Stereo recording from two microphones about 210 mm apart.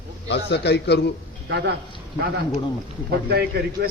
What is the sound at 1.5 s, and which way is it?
Speech, 50° right (ahead or behind).